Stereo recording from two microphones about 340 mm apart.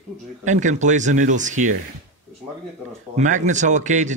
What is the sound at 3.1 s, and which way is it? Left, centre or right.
A man's voice, right.